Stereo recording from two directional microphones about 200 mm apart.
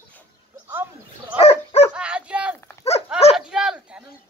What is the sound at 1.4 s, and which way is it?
Dog, 30° left (ahead or behind).